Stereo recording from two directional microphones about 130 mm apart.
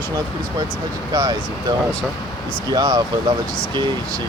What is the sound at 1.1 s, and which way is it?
Speech, 30° right (ahead or behind).